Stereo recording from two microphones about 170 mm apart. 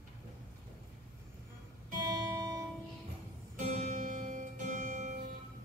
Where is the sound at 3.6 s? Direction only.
40° right (ahead or behind).